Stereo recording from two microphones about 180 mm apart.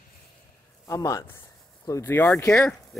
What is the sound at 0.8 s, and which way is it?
Speech, 20° left (ahead or behind).